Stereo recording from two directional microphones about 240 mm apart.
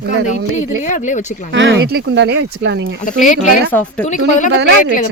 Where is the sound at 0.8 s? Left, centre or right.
Left.